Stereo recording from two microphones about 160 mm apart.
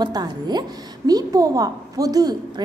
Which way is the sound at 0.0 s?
25° right (ahead or behind).